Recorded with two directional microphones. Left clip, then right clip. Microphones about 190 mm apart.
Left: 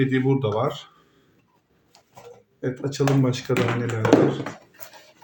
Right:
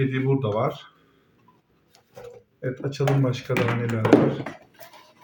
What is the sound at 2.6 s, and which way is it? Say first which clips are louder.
Speech: left 3 dB; 35° left (ahead or behind).